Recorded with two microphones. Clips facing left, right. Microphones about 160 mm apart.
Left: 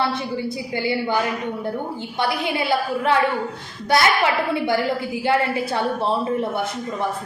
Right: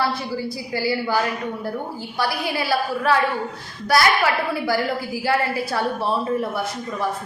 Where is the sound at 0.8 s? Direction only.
20° left (ahead or behind).